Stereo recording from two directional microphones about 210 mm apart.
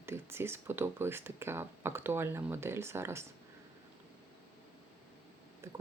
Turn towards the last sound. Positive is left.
turn(degrees=-15)  # may be behind; listen again after turning